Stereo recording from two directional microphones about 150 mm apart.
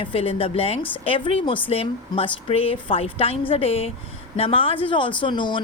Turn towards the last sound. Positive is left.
turn(degrees=30)  # may be behind; listen again after turning